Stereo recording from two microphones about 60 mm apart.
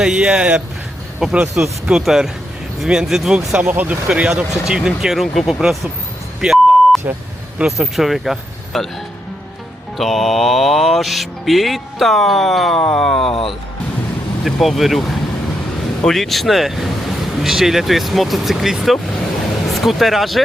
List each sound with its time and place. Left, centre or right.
0.0 s speech: centre
1.2 s speech: centre
1.6 s speech: right
2.0 s speech: centre
3.6 s speech: right
4.1 s speech: centre
6.4 s beep: centre
7.6 s speech: centre
10.0 s speech: centre